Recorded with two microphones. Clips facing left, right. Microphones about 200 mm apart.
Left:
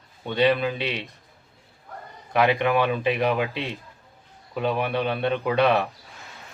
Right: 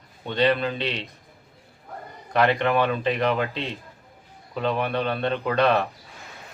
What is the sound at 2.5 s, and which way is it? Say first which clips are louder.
Speech: even; 15° left (ahead or behind).